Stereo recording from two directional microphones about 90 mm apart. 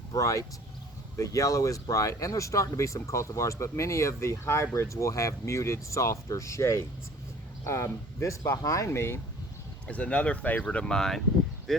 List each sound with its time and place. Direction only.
0.1 s speech: 35° left (ahead or behind)
9.8 s speech: 15° left (ahead or behind)